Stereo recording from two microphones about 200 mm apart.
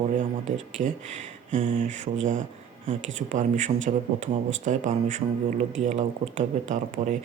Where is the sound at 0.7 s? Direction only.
35° right (ahead or behind).